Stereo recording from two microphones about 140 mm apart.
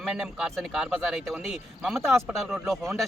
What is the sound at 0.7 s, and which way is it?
Speech, 5° right (ahead or behind).